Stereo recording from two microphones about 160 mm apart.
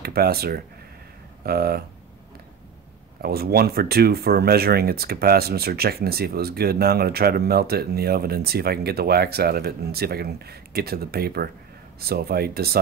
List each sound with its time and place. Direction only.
0.0 s speech: 75° right (ahead or behind)
3.2 s speech: 75° right (ahead or behind)